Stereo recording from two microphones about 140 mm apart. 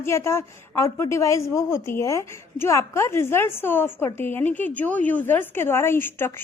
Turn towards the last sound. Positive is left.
turn(degrees=15)  # may be behind; listen again after turning